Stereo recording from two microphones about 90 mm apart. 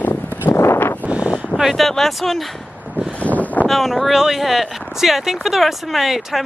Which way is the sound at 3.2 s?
15° left (ahead or behind).